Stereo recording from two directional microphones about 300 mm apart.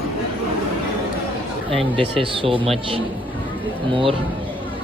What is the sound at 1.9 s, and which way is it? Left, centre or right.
Speech, centre.